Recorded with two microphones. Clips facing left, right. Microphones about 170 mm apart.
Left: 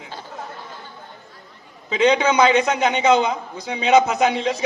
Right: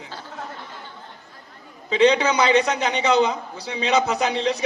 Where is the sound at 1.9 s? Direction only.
35° right (ahead or behind).